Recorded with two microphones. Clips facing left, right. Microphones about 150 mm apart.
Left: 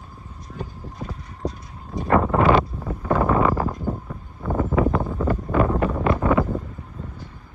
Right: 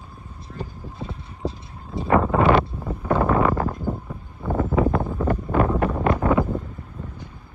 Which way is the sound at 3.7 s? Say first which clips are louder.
Even; 5° right (ahead or behind).